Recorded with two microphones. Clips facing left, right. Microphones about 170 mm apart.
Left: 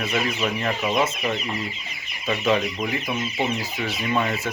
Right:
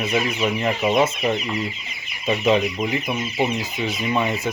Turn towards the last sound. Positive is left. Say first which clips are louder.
# right 2 dB
turn(degrees=-15)  # may be behind; listen again after turning